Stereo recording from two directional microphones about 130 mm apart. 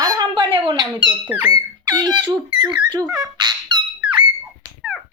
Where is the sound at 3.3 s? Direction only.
35° right (ahead or behind).